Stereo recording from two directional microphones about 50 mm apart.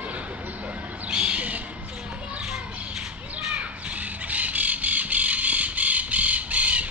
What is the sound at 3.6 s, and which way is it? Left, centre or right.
Crow, right.